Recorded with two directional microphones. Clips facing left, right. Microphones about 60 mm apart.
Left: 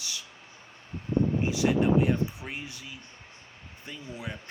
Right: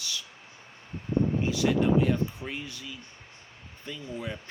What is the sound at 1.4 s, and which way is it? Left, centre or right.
Speech, centre.